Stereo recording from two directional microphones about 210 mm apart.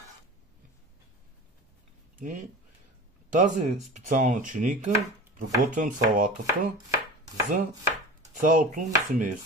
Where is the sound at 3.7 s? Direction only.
Centre (ahead or behind).